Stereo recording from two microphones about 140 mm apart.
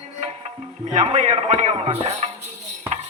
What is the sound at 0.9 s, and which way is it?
A man's voice, 55° right (ahead or behind).